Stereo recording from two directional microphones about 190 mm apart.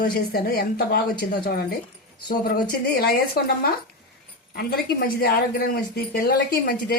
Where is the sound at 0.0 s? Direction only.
55° left (ahead or behind).